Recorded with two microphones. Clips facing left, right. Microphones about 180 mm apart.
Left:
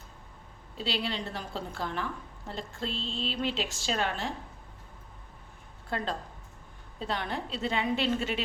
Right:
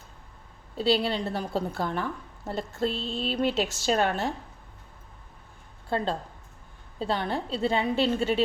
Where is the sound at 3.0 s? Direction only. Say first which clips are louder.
Right 4 dB; 5° right (ahead or behind).